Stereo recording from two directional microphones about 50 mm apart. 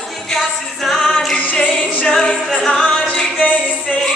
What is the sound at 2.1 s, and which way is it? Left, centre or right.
A capella, centre.